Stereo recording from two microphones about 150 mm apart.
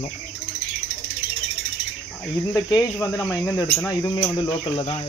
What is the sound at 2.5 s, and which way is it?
Speech, 25° left (ahead or behind).